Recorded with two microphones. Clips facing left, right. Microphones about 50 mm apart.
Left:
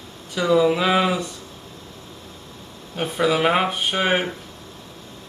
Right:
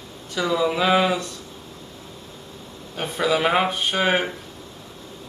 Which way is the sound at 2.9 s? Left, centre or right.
Centre.